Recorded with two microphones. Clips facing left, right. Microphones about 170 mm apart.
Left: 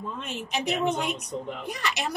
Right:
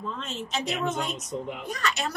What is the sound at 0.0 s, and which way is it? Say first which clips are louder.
A woman's voice: even; 10° left (ahead or behind).